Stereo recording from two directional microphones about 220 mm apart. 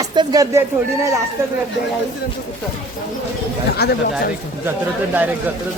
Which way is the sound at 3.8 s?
50° left (ahead or behind).